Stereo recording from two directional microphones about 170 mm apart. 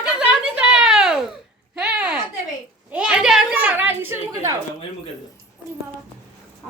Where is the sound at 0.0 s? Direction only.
5° right (ahead or behind).